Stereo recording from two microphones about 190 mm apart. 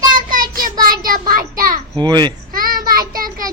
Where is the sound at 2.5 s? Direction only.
50° right (ahead or behind).